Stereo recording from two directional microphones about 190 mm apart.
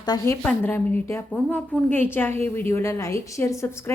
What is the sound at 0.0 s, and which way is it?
Speech, 20° left (ahead or behind).